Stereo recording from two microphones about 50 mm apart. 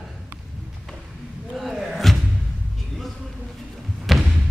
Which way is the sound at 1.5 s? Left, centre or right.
Centre.